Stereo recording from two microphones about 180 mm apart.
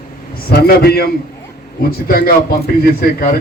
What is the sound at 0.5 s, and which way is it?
A man's voice, 60° left (ahead or behind).